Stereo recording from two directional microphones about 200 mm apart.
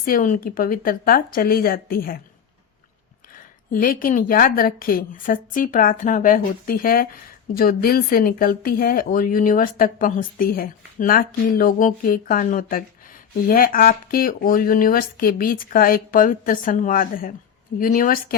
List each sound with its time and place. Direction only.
0.0 s speech: 45° left (ahead or behind)
3.7 s speech: 45° left (ahead or behind)